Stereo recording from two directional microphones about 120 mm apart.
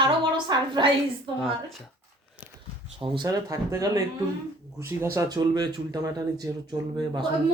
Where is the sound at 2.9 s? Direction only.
40° right (ahead or behind).